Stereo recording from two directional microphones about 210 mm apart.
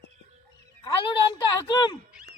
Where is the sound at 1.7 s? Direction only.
20° left (ahead or behind).